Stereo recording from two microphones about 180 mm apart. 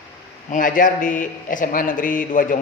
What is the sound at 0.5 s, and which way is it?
A man's voice, 45° left (ahead or behind).